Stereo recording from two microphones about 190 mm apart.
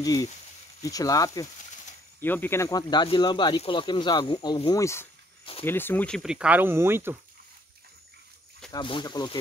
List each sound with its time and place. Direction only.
0.0 s speech: 20° left (ahead or behind)
5.4 s speech: 30° left (ahead or behind)
5.7 s speech: 10° left (ahead or behind); by 7.2 s 10° right (ahead or behind)
8.7 s speech: 25° left (ahead or behind)